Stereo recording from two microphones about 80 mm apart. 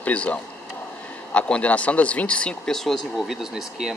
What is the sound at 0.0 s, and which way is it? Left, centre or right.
Speech, centre.